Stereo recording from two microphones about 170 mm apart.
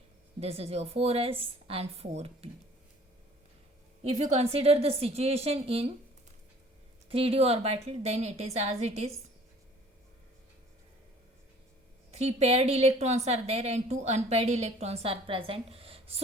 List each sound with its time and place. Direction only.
0.3 s a woman's voice: 35° right (ahead or behind)
4.0 s a woman's voice: 40° right (ahead or behind)
7.1 s a woman's voice: 35° right (ahead or behind)
12.1 s a woman's voice: 40° right (ahead or behind)